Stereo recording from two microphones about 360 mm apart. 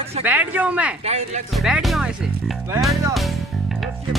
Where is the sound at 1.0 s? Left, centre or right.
Centre.